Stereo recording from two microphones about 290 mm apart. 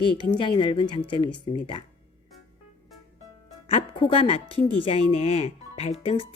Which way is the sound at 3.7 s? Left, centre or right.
Centre.